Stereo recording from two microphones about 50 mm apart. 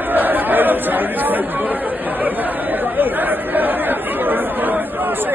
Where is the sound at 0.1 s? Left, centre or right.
Right.